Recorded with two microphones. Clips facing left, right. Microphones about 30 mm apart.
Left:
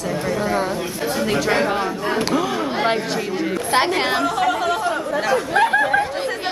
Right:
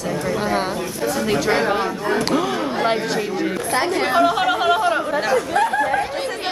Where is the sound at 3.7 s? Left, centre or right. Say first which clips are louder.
Left 2 dB; left.